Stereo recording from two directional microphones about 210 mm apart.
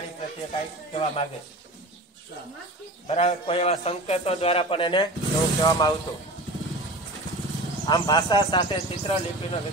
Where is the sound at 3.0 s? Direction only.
30° left (ahead or behind).